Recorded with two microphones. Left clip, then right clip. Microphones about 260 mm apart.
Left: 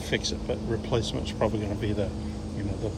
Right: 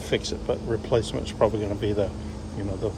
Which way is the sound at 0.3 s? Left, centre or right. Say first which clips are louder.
Right 3 dB; centre.